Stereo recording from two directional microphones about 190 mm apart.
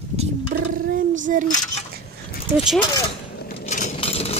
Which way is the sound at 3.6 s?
40° left (ahead or behind).